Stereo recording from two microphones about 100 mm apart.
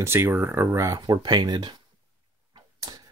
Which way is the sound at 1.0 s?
50° right (ahead or behind).